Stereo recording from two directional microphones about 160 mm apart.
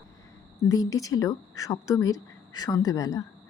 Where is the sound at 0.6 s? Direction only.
20° left (ahead or behind).